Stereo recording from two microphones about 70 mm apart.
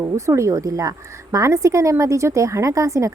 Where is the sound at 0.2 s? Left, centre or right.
Right.